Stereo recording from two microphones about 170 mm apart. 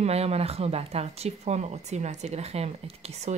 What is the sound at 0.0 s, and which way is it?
Speech, 40° right (ahead or behind).